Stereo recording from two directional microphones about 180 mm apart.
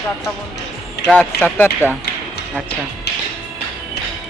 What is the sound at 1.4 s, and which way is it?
Speech, 10° left (ahead or behind).